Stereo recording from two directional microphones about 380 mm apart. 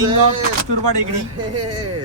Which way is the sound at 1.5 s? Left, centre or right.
Right.